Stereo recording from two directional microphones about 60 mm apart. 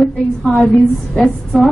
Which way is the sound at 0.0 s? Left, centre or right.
Centre.